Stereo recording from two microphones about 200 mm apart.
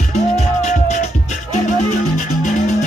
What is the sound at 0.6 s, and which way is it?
Music, 40° left (ahead or behind).